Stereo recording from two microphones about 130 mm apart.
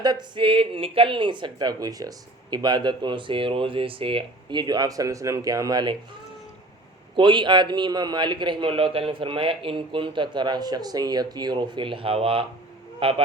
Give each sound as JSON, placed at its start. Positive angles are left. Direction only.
{"t": 0.0, "sound": "speech", "side_deg": -35}
{"t": 7.2, "sound": "speech", "side_deg": -40}